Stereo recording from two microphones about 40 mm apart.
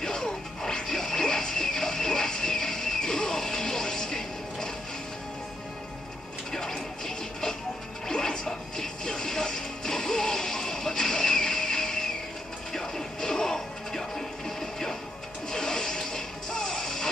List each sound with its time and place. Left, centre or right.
0.0 s music: centre
6.5 s music: centre